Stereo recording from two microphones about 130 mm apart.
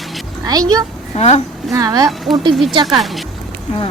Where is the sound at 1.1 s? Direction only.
55° left (ahead or behind).